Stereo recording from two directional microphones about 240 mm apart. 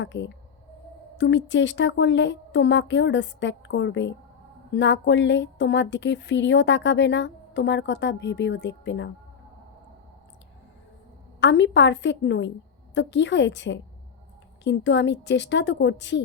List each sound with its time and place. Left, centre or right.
0.0 s speech: left
11.3 s speech: left